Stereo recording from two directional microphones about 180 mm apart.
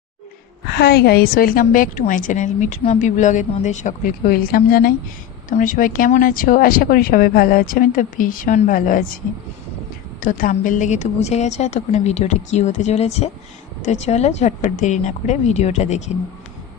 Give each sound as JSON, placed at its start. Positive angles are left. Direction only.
{"t": 0.7, "sound": "a woman's voice", "side_deg": 65}
{"t": 10.2, "sound": "a woman's voice", "side_deg": 50}